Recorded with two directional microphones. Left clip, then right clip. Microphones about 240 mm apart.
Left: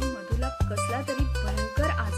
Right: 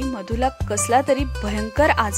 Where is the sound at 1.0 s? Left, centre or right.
Centre.